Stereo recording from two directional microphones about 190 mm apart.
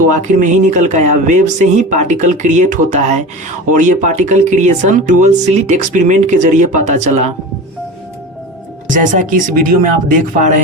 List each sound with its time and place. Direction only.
0.1 s speech: 40° right (ahead or behind)
8.9 s speech: 45° right (ahead or behind)